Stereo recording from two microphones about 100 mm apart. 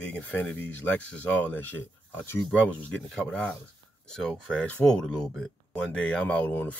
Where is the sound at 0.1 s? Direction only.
15° left (ahead or behind).